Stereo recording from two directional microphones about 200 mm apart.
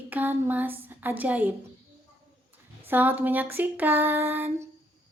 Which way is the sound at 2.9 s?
10° right (ahead or behind).